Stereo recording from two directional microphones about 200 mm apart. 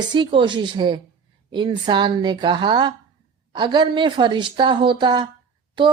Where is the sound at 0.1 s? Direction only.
25° right (ahead or behind).